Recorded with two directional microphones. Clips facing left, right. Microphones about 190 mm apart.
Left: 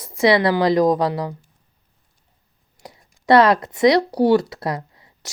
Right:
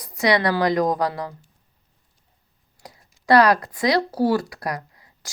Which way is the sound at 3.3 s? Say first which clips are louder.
Left 2 dB; 25° left (ahead or behind).